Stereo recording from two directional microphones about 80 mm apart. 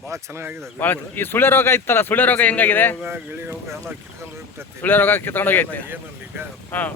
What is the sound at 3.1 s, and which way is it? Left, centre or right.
Speech, right.